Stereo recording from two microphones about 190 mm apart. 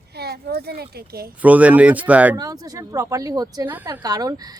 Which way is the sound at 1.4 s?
10° right (ahead or behind).